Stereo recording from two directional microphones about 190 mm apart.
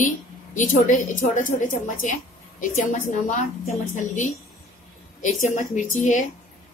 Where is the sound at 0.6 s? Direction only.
40° left (ahead or behind).